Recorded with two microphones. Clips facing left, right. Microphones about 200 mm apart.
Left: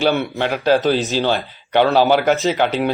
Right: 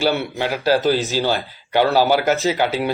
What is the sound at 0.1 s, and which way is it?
Speech, 60° left (ahead or behind).